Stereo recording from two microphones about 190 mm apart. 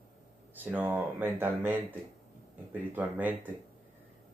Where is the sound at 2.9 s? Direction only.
10° right (ahead or behind).